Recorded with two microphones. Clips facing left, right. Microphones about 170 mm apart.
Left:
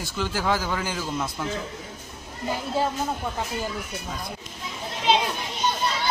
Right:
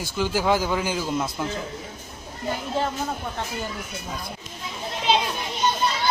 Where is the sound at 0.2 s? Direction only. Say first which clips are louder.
Right 4 dB; 15° right (ahead or behind).